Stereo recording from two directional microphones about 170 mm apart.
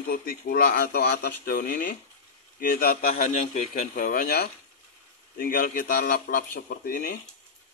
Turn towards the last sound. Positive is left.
turn(degrees=65)  # may be behind; listen again after turning